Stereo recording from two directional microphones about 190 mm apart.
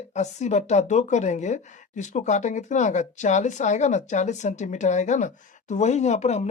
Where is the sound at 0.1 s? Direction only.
35° left (ahead or behind).